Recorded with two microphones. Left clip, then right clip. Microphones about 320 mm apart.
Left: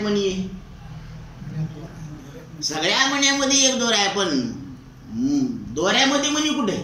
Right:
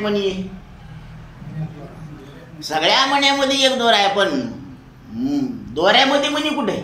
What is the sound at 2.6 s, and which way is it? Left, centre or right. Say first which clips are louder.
Speech: right 4 dB; centre.